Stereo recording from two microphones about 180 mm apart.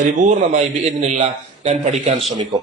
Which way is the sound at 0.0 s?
45° right (ahead or behind).